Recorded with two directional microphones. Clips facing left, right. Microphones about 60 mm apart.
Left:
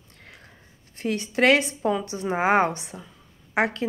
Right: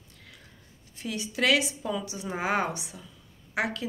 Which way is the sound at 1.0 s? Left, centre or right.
Left.